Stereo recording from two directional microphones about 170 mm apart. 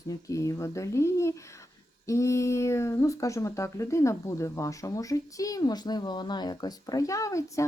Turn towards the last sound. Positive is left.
turn(degrees=20)  # may be behind; listen again after turning